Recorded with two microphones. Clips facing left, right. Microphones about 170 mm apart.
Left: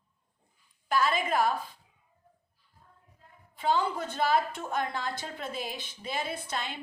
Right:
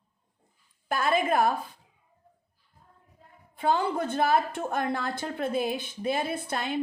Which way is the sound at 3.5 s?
55° right (ahead or behind).